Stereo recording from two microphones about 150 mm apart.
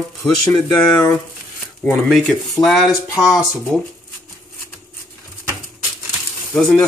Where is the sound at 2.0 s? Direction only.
Centre (ahead or behind).